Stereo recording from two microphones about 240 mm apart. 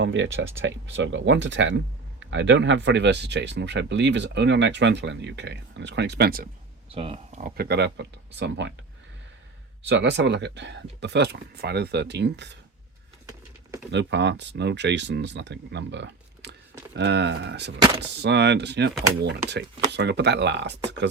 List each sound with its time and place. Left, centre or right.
0.0 s speech: right
6.9 s speech: right
7.4 s speech: right
9.8 s speech: right
13.9 s speech: right
17.7 s speech: centre
18.2 s speech: right